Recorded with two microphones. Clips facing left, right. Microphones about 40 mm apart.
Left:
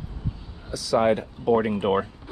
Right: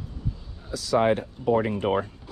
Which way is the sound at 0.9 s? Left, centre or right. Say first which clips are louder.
Left 1 dB; left.